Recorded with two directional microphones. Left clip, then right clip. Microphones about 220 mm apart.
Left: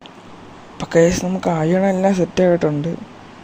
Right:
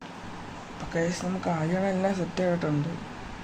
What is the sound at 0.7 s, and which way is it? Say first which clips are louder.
Speech: left 15 dB; 40° left (ahead or behind).